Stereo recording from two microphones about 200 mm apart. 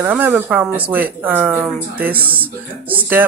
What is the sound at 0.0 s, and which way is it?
Speech, 10° right (ahead or behind).